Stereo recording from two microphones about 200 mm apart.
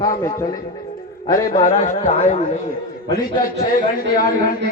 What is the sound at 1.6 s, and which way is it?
Speech, 40° left (ahead or behind).